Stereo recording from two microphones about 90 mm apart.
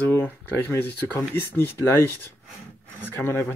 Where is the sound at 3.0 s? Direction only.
25° left (ahead or behind).